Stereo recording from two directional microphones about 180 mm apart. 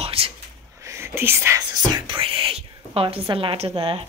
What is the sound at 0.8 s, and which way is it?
Whispering, 15° right (ahead or behind).